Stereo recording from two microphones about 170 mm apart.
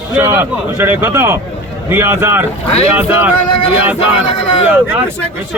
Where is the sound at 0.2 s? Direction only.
10° right (ahead or behind).